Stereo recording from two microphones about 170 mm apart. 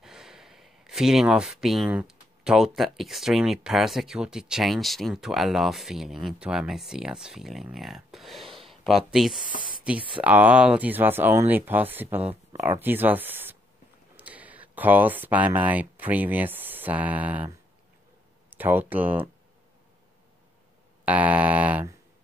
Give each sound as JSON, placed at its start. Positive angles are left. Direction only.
{"t": 0.0, "sound": "speech", "side_deg": -5}
{"t": 9.6, "sound": "a sound", "side_deg": -30}
{"t": 10.2, "sound": "speech", "side_deg": -10}
{"t": 18.5, "sound": "speech", "side_deg": -10}
{"t": 21.0, "sound": "speech", "side_deg": -10}